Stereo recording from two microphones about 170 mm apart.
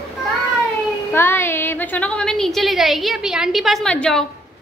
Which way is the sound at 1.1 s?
15° left (ahead or behind).